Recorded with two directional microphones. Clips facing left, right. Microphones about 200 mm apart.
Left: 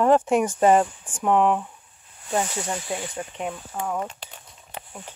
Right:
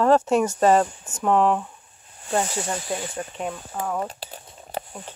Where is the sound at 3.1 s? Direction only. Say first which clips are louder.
Right 1 dB; 20° left (ahead or behind).